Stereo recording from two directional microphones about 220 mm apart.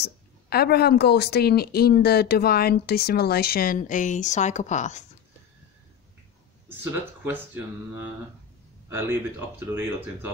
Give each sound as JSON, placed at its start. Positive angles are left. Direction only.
{"t": 0.0, "sound": "speech", "side_deg": 45}
{"t": 6.7, "sound": "speech", "side_deg": -10}
{"t": 8.8, "sound": "a sound", "side_deg": -10}
{"t": 9.8, "sound": "speech", "side_deg": -10}